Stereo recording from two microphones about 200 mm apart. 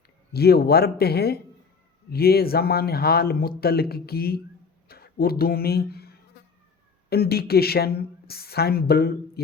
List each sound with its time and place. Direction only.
0.3 s a woman's voice: 50° left (ahead or behind)